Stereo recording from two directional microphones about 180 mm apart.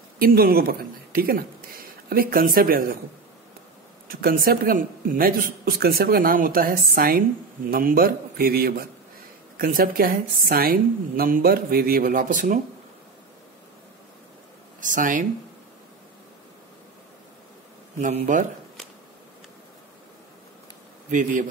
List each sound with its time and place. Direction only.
0.2 s a man's voice: 55° right (ahead or behind)
4.1 s a man's voice: 55° right (ahead or behind)
14.8 s a man's voice: 45° right (ahead or behind)
18.0 s a man's voice: 45° right (ahead or behind)
21.1 s a man's voice: 45° right (ahead or behind)